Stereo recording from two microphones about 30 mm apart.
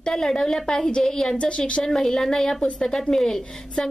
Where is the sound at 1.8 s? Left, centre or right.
Centre.